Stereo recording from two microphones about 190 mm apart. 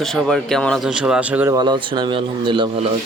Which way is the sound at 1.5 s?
20° right (ahead or behind).